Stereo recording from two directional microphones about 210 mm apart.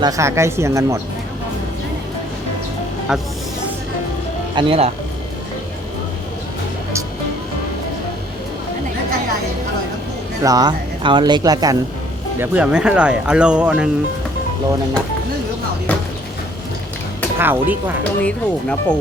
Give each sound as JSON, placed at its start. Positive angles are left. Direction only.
{"t": 0.0, "sound": "speech", "side_deg": -15}
{"t": 3.1, "sound": "speech", "side_deg": -5}
{"t": 4.5, "sound": "speech", "side_deg": -25}
{"t": 10.4, "sound": "speech", "side_deg": -20}
{"t": 12.4, "sound": "speech", "side_deg": -5}
{"t": 15.9, "sound": "a sound", "side_deg": 5}
{"t": 17.3, "sound": "speech", "side_deg": -10}
{"t": 18.2, "sound": "speech", "side_deg": 5}